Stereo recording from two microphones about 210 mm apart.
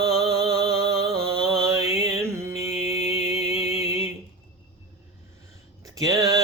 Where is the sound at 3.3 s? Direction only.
30° left (ahead or behind).